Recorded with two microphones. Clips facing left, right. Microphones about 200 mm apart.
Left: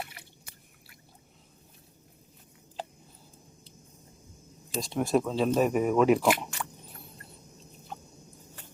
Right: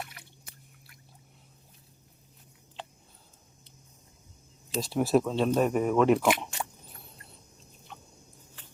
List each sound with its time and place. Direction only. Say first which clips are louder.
4.8 s speech: right 2 dB; 5° right (ahead or behind)
7.9 s rodents: left 6 dB; 40° left (ahead or behind)